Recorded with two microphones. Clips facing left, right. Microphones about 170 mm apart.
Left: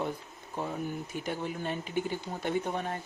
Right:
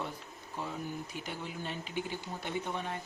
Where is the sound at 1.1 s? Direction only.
50° left (ahead or behind).